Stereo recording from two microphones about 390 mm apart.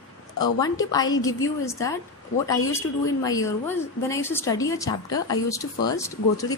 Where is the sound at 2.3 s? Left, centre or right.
Left.